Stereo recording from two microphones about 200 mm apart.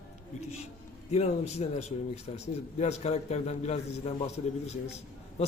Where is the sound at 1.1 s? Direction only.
30° left (ahead or behind).